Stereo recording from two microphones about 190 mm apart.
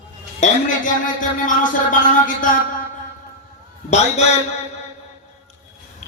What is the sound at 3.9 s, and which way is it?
Speech, 35° left (ahead or behind).